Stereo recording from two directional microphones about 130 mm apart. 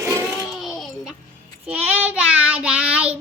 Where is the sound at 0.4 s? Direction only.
Centre (ahead or behind).